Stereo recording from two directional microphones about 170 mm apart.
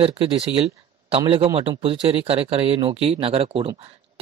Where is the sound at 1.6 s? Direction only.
35° right (ahead or behind).